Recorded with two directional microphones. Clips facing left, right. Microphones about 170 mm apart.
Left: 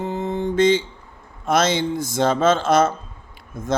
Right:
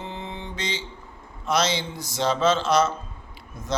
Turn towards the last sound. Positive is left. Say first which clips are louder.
# left 7 dB
turn(degrees=50)  # may be behind; listen again after turning